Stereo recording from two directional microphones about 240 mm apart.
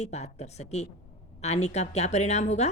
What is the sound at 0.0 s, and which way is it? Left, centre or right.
A woman's voice, left.